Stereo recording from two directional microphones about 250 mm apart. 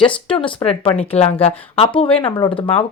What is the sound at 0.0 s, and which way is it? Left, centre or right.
Speech, centre.